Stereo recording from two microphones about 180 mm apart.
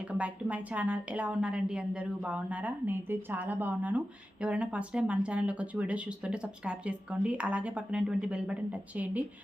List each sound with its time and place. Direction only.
0.1 s a woman's voice: 5° right (ahead or behind)